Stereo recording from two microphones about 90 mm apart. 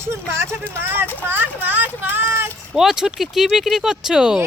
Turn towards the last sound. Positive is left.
turn(degrees=-5)  # may be behind; listen again after turning